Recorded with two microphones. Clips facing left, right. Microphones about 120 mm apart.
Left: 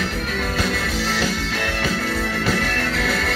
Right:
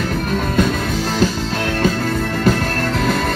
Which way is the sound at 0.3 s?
45° right (ahead or behind).